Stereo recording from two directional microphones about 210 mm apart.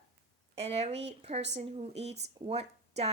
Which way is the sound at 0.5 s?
30° right (ahead or behind).